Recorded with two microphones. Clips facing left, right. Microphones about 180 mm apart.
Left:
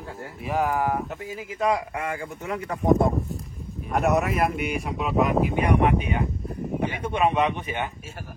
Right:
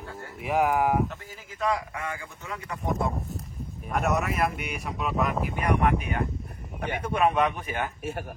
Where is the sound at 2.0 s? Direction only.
30° left (ahead or behind).